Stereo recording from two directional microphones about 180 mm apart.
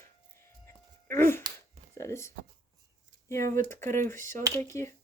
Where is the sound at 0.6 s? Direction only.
15° left (ahead or behind).